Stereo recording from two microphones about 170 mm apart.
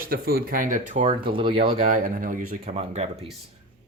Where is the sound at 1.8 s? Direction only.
55° right (ahead or behind).